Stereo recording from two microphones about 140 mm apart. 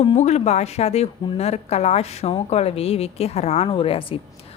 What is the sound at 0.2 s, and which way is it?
A woman's voice, 55° left (ahead or behind).